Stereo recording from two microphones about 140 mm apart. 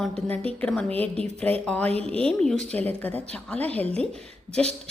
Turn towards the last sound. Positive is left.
turn(degrees=5)  # may be behind; listen again after turning